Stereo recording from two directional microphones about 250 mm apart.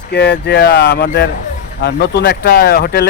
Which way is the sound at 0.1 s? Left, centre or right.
Left.